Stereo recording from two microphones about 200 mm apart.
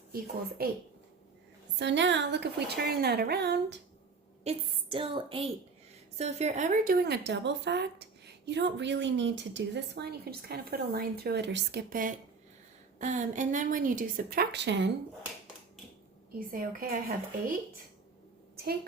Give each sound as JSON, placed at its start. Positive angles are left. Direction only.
{"t": 0.6, "sound": "a woman's voice", "side_deg": -50}
{"t": 1.8, "sound": "a woman's voice", "side_deg": -60}
{"t": 4.4, "sound": "a woman's voice", "side_deg": -25}
{"t": 7.0, "sound": "a woman's voice", "side_deg": -55}
{"t": 16.4, "sound": "a woman's voice", "side_deg": -45}
{"t": 18.5, "sound": "a sound", "side_deg": -50}